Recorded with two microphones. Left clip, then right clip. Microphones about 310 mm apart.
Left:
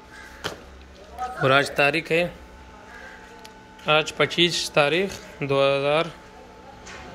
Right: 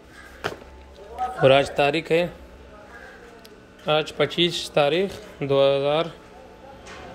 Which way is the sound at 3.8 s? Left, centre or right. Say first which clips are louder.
Left 1 dB; centre.